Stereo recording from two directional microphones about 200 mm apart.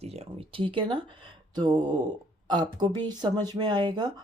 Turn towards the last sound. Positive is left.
turn(degrees=-20)  # may be behind; listen again after turning